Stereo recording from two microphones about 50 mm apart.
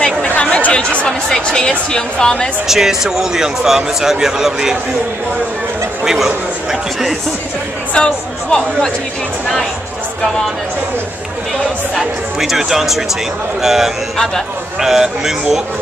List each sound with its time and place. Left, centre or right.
0.4 s speech: left
2.7 s speech: centre
6.0 s a man's voice: centre
7.9 s speech: centre
11.9 s speech: centre
14.1 s speech: centre
14.8 s speech: centre